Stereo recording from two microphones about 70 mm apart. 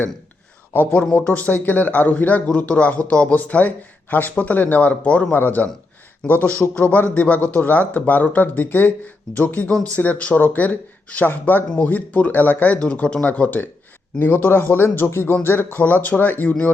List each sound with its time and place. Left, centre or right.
1.1 s a man's voice: left
9.6 s speech: centre
10.0 s a man's voice: left